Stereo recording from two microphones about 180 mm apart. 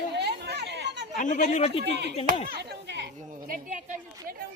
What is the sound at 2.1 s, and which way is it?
Speech, 35° left (ahead or behind).